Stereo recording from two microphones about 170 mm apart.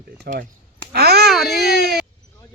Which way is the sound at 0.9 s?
70° right (ahead or behind).